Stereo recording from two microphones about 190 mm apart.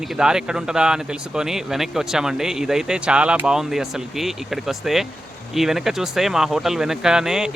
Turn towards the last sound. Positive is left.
turn(degrees=-5)  # may be behind; listen again after turning